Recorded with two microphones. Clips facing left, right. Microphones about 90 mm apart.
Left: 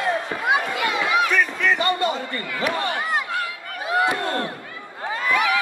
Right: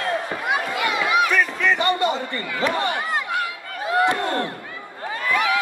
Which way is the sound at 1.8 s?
20° right (ahead or behind).